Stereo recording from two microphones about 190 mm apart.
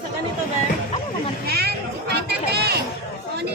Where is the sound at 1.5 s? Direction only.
55° right (ahead or behind).